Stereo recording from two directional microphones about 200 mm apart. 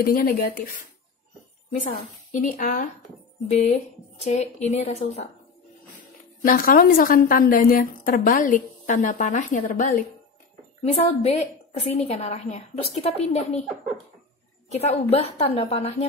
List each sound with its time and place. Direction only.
0.0 s a woman's voice: 45° left (ahead or behind)
2.3 s a woman's voice: 45° left (ahead or behind)
6.4 s a woman's voice: 45° left (ahead or behind)
14.7 s a woman's voice: 30° left (ahead or behind)